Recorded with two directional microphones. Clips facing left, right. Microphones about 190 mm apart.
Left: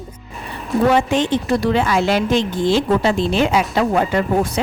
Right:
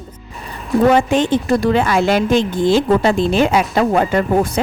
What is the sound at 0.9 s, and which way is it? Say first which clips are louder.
A woman's voice: right 2 dB; 50° right (ahead or behind).